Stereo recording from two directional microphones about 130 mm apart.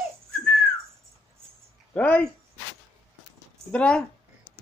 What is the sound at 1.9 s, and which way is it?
Speech, 10° left (ahead or behind).